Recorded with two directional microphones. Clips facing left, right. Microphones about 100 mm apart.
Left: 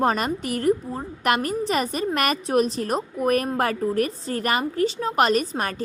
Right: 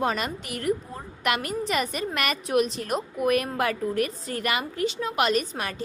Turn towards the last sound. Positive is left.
turn(degrees=45)  # may be behind; listen again after turning